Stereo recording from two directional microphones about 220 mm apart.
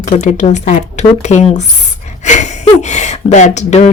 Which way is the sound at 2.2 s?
35° left (ahead or behind).